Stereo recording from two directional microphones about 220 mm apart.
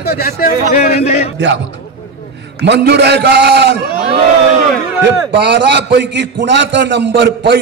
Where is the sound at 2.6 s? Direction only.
50° right (ahead or behind).